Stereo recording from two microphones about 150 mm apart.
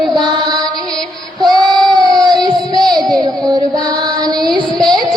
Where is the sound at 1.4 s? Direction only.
25° right (ahead or behind).